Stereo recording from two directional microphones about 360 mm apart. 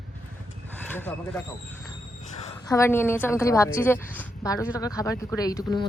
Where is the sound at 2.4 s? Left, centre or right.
Centre.